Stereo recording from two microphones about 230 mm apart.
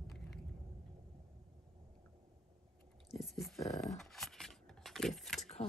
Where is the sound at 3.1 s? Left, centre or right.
Centre.